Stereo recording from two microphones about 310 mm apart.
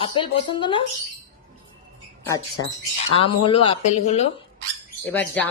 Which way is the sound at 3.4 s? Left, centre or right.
Centre.